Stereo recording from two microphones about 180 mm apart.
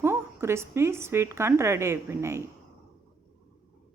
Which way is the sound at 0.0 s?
15° right (ahead or behind).